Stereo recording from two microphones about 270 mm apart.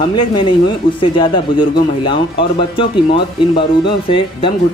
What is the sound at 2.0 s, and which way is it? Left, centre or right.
Speech, centre.